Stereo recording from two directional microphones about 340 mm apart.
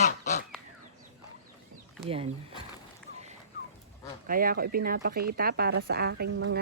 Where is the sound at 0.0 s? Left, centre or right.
Left.